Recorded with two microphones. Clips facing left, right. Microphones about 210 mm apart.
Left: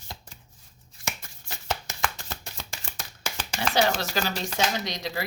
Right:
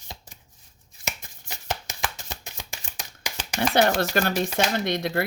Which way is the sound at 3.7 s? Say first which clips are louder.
Right 4 dB; 55° right (ahead or behind).